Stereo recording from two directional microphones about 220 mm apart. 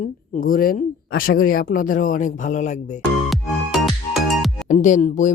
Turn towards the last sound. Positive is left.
turn(degrees=30)  # may be behind; listen again after turning